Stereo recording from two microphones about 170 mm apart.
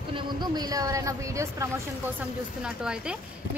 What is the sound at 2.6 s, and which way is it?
Speech, 5° right (ahead or behind).